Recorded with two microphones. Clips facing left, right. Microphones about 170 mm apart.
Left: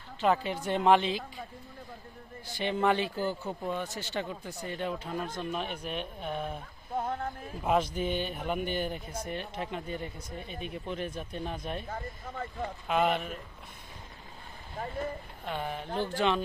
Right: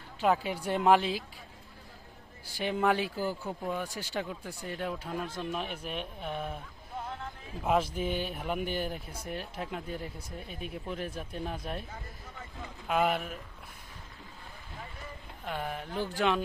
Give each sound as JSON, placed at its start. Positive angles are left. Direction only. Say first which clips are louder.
{"t": 0.2, "sound": "speech", "louder": "even", "side_deg": -10}
{"t": 2.6, "sound": "speech", "louder": "left 1 dB", "side_deg": -5}
{"t": 6.9, "sound": "a sound", "louder": "left 7 dB", "side_deg": 50}
{"t": 7.6, "sound": "speech", "louder": "left 1 dB", "side_deg": -5}
{"t": 11.9, "sound": "speech", "louder": "left 7 dB", "side_deg": 55}
{"t": 12.9, "sound": "speech", "louder": "even", "side_deg": -5}
{"t": 14.8, "sound": "vehicle", "louder": "left 12 dB", "side_deg": 50}
{"t": 15.4, "sound": "speech", "louder": "left 1 dB", "side_deg": -5}